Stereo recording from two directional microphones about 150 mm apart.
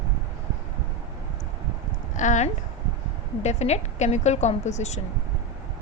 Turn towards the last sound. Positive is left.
turn(degrees=50)  # may be behind; listen again after turning